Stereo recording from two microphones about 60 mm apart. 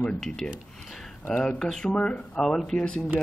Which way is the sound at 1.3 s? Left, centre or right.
Centre.